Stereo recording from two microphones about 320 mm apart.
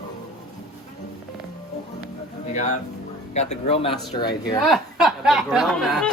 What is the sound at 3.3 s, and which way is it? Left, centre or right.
Speech, left.